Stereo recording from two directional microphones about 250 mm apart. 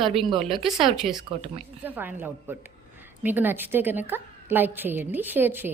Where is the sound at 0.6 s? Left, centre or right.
Centre.